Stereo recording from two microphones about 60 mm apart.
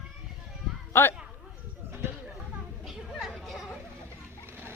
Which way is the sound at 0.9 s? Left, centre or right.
Left.